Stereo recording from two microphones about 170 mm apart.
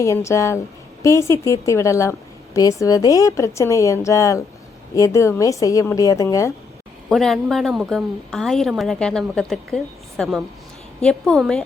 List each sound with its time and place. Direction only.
0.0 s a woman's voice: 15° left (ahead or behind)
7.1 s a woman's voice: centre (ahead or behind)